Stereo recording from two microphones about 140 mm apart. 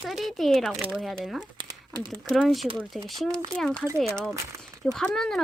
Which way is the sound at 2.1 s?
5° left (ahead or behind).